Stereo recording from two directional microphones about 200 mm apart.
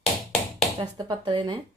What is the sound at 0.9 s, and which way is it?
Speech, 20° right (ahead or behind).